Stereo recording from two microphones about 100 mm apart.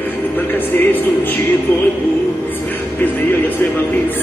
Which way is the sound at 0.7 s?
20° left (ahead or behind).